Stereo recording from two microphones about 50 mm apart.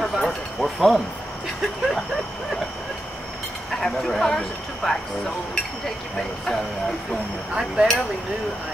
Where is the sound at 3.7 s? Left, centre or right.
Centre.